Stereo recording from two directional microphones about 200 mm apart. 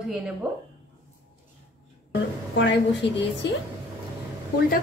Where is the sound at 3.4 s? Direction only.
60° left (ahead or behind).